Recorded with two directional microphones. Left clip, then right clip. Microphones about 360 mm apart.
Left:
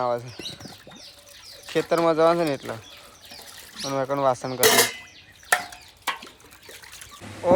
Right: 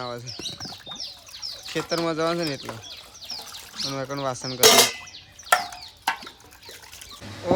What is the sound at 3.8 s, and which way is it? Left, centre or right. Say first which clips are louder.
Speech: left 5 dB; centre.